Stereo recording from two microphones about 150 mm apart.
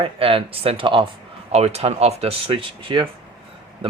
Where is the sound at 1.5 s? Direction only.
45° right (ahead or behind).